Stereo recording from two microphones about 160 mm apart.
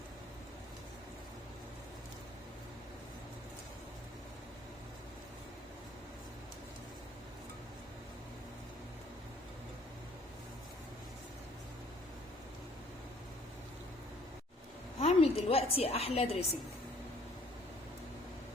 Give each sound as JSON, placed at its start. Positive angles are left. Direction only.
{"t": 14.9, "sound": "a woman's voice", "side_deg": 40}